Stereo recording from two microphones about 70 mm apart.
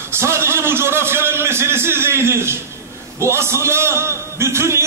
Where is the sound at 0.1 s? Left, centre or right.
Right.